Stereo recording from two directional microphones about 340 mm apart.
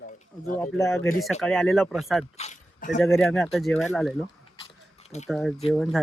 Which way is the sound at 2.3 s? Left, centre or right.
Left.